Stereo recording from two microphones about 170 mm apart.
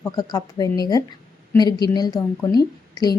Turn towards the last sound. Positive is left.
turn(degrees=25)  # may be behind; listen again after turning